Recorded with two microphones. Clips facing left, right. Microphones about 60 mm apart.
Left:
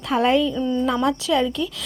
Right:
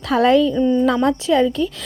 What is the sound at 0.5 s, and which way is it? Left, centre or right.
Speech, right.